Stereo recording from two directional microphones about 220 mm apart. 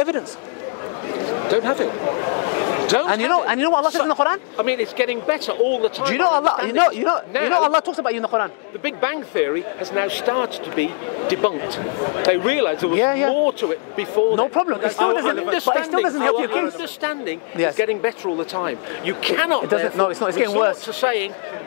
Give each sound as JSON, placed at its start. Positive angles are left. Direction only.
{"t": 1.6, "sound": "a man's voice", "side_deg": 25}
{"t": 12.2, "sound": "a man's voice", "side_deg": 20}